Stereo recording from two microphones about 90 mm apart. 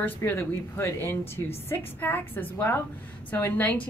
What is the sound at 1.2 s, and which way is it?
Speech, 90° left.